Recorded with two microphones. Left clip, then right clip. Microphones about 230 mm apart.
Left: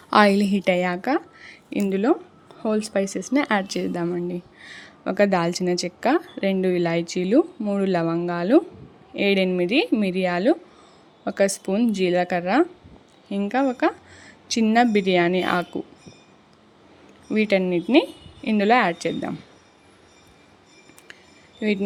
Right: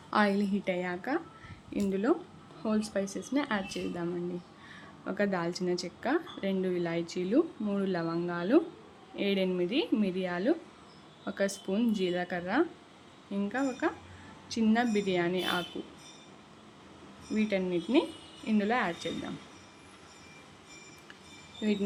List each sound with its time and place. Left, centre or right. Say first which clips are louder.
0.1 s a woman's voice: left 11 dB; left
17.3 s a woman's voice: left 10 dB; left
21.6 s a woman's voice: left 8 dB; left